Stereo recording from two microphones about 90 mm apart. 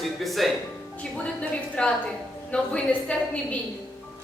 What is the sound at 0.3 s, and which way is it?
Choir, centre (ahead or behind).